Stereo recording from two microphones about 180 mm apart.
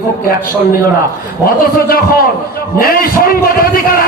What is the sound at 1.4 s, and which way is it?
A man's voice, 55° left (ahead or behind).